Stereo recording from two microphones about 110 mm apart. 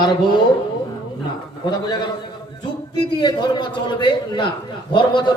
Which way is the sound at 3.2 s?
45° left (ahead or behind).